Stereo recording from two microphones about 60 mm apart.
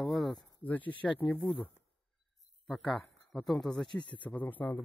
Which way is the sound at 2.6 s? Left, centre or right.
Centre.